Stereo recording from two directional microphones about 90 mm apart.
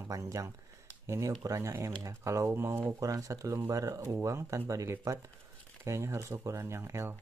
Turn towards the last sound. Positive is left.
turn(degrees=-30)  # may be behind; listen again after turning